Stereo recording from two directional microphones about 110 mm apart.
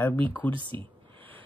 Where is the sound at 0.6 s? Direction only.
50° right (ahead or behind).